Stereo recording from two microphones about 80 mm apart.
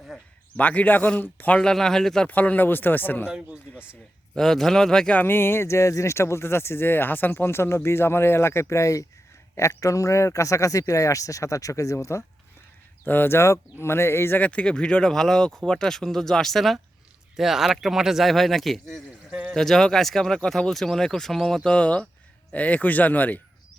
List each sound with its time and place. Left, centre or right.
0.1 s speech: centre
0.5 s speech: centre
2.2 s speech: centre
3.2 s speech: centre
4.4 s speech: centre
5.1 s speech: left
13.1 s speech: left; by 19.0 s centre
19.3 s speech: centre
19.5 s speech: centre; by 23.4 s left